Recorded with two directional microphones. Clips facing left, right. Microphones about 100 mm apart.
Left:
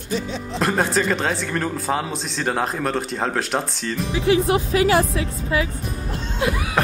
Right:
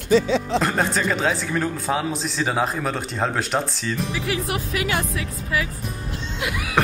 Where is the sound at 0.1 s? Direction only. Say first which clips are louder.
Right 8 dB; 90° right.